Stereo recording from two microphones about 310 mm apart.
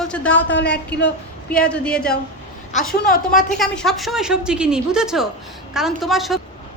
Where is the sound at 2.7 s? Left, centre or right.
Left.